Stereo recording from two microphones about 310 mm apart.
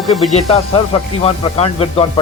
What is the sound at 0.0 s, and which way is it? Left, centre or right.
Music, centre.